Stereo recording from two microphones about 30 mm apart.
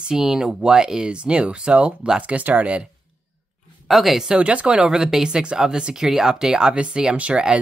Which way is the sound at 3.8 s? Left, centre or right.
Centre.